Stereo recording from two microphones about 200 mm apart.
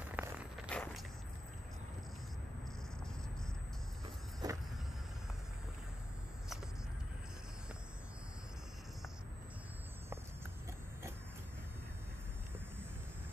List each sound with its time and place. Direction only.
0.0 s walk: 10° right (ahead or behind)
0.7 s walk: 5° left (ahead or behind)
4.4 s vehicle: 20° right (ahead or behind)